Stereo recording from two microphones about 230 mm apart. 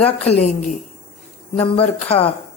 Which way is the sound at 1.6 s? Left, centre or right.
Left.